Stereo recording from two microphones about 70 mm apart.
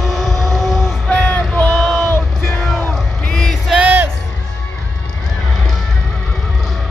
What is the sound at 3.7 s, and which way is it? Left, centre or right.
Music, right.